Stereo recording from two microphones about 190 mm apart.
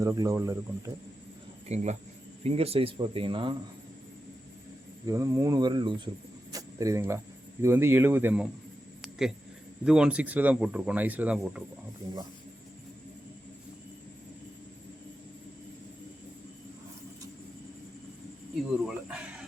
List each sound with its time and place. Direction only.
0.0 s speech: 15° right (ahead or behind)
1.6 s speech: 35° right (ahead or behind)
5.0 s speech: 15° right (ahead or behind)
9.0 s a sound: centre (ahead or behind)
9.8 s speech: 5° right (ahead or behind)
18.9 s speech: 5° right (ahead or behind)